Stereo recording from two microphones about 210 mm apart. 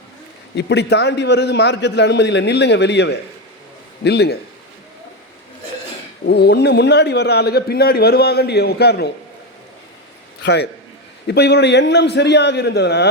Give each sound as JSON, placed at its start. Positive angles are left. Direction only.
{"t": 0.5, "sound": "a man's voice", "side_deg": 55}
{"t": 6.2, "sound": "speech", "side_deg": 50}
{"t": 10.4, "sound": "a man's voice", "side_deg": 55}